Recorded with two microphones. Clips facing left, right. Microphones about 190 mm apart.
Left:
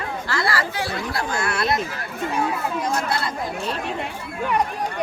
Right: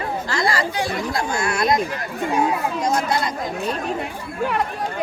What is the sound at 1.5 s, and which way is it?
Speech, 15° right (ahead or behind).